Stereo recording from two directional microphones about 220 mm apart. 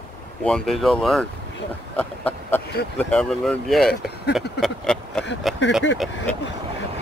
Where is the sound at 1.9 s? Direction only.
10° left (ahead or behind).